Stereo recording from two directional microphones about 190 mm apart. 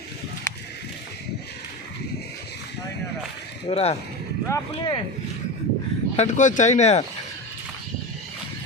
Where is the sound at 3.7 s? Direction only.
35° left (ahead or behind).